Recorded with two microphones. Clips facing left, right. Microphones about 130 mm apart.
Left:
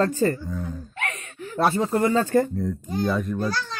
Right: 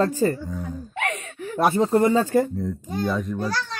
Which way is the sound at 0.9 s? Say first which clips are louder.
Right 4 dB; 90° right.